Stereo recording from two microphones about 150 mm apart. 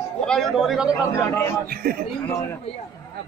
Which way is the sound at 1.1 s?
15° left (ahead or behind).